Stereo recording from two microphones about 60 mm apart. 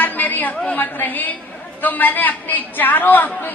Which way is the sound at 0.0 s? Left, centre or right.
Left.